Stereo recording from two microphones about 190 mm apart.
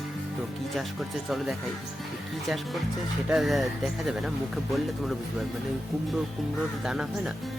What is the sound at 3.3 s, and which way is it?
Speech, centre (ahead or behind).